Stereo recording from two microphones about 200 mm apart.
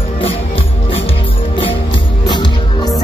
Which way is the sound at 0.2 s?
30° left (ahead or behind).